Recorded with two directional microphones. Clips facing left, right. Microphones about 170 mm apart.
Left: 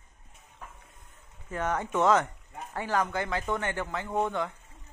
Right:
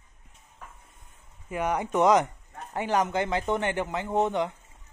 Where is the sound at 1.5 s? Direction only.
15° right (ahead or behind).